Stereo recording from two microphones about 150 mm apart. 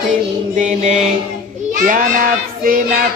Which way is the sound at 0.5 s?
50° right (ahead or behind).